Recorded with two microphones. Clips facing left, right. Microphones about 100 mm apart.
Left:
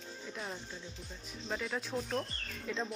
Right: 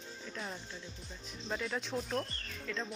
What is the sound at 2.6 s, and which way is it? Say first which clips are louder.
Speech: left 2 dB; 15° left (ahead or behind).